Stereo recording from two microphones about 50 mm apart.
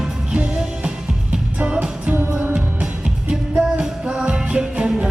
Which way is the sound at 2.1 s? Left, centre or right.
Right.